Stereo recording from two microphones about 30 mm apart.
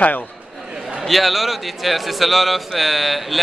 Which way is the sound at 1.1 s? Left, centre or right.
Centre.